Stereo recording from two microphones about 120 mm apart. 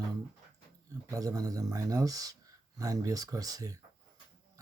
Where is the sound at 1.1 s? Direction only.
30° right (ahead or behind).